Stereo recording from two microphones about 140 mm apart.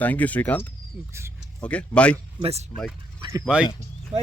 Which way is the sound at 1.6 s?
10° left (ahead or behind).